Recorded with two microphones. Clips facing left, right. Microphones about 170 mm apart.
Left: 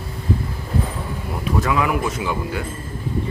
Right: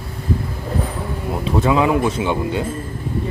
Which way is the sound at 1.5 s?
25° right (ahead or behind).